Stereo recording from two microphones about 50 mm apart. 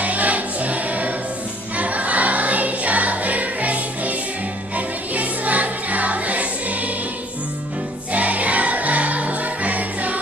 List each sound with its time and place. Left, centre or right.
0.0 s music: right
8.1 s music: right